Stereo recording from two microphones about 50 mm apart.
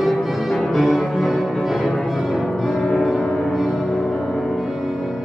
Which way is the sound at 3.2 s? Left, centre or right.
Centre.